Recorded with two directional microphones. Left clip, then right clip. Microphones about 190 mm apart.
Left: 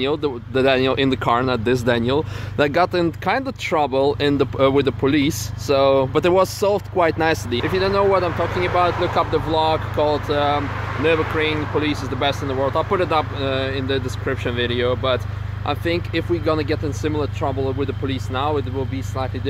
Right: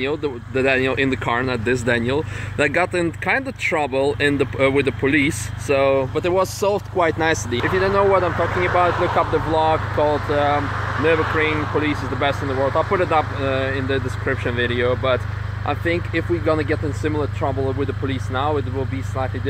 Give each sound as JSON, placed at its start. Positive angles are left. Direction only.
{"t": 0.0, "sound": "speech", "side_deg": 25}
{"t": 6.1, "sound": "speech", "side_deg": 45}
{"t": 6.7, "sound": "speech", "side_deg": 20}